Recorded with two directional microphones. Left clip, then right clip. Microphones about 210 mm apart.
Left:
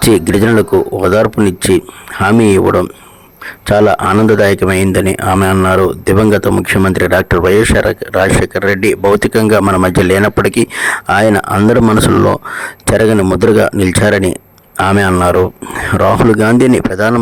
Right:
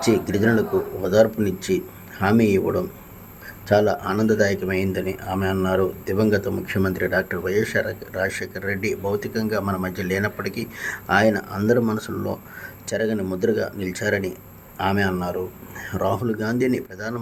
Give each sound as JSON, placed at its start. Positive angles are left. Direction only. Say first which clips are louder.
{"t": 0.0, "sound": "speech", "louder": "left 10 dB", "side_deg": 50}